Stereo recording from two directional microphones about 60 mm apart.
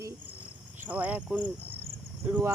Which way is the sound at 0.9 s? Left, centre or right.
Right.